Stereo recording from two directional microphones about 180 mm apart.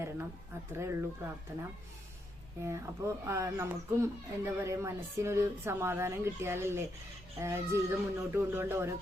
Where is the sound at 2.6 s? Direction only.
15° right (ahead or behind).